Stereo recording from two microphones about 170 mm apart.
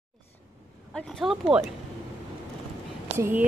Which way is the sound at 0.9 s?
Centre (ahead or behind).